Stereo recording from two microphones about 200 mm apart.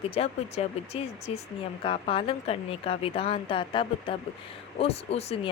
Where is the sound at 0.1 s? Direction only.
30° left (ahead or behind).